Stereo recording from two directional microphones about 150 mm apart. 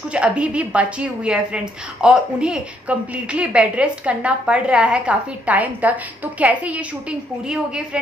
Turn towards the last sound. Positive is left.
turn(degrees=-5)  # may be behind; listen again after turning